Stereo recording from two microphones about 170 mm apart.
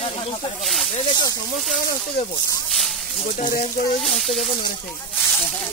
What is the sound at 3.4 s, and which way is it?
Speech, 50° left (ahead or behind).